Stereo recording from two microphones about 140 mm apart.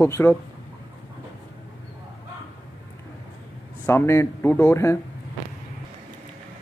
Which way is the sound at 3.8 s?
15° left (ahead or behind).